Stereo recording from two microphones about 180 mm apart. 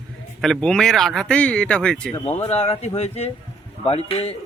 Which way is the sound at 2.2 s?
35° left (ahead or behind).